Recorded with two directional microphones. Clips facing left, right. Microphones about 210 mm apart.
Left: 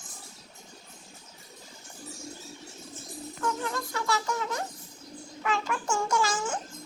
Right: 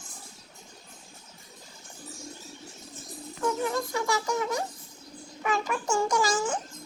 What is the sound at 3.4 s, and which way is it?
Speech, 15° right (ahead or behind).